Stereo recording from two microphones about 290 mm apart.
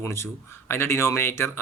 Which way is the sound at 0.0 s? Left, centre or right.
Centre.